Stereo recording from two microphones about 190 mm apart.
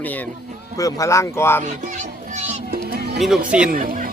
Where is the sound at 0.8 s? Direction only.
15° left (ahead or behind).